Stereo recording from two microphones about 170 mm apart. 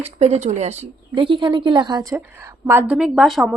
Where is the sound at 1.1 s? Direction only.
30° right (ahead or behind); by 2.9 s 15° right (ahead or behind).